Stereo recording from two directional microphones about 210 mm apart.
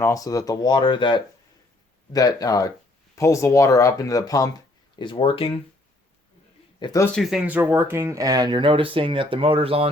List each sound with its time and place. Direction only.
0.0 s speech: 15° left (ahead or behind)
6.7 s speech: 20° left (ahead or behind)
7.2 s speech: centre (ahead or behind); by 9.9 s 25° right (ahead or behind)